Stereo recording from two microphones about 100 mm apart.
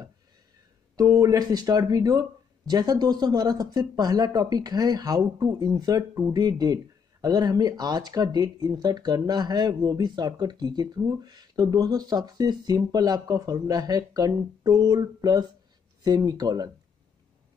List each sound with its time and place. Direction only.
0.9 s speech: 35° right (ahead or behind)